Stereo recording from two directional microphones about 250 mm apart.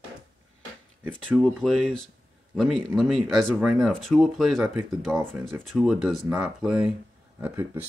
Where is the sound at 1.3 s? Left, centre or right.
Centre.